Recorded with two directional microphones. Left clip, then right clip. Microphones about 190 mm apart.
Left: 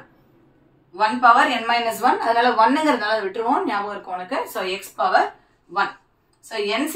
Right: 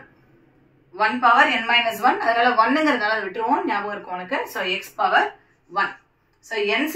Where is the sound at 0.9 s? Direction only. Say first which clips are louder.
Left 1 dB; 15° left (ahead or behind).